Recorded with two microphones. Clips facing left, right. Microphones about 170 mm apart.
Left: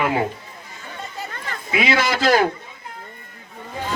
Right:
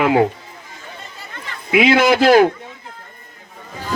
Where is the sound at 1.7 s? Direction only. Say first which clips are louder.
Right 7 dB; 55° right (ahead or behind).